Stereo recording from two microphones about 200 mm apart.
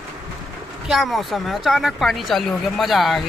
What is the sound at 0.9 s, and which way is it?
A woman's voice, centre (ahead or behind).